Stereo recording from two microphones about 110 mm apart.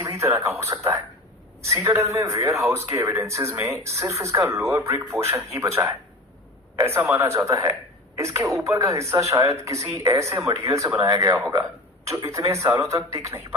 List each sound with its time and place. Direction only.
0.0 s a man's voice: 25° right (ahead or behind)